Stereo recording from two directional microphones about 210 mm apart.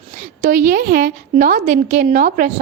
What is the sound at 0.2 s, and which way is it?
A woman's voice, 40° right (ahead or behind).